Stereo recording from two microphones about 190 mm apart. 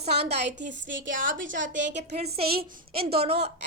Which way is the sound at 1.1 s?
45° right (ahead or behind).